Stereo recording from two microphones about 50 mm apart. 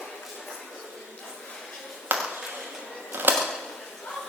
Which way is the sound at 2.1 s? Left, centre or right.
Right.